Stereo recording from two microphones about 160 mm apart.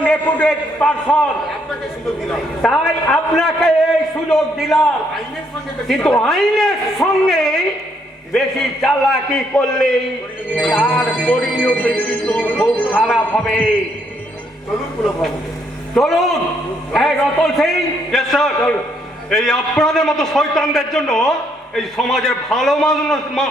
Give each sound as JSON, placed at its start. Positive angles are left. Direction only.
{"t": 0.0, "sound": "a man's voice", "side_deg": 10}
{"t": 2.6, "sound": "a man's voice", "side_deg": 0}
{"t": 5.9, "sound": "a man's voice", "side_deg": 0}
{"t": 16.0, "sound": "a man's voice", "side_deg": 0}